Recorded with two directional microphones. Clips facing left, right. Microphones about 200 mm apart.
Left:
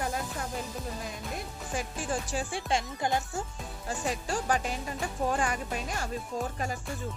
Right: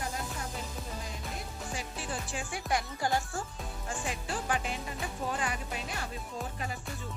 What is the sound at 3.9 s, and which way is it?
Speech, 40° left (ahead or behind).